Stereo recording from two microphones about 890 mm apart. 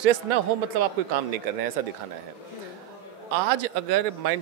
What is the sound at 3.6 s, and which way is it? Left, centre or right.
Speech, right.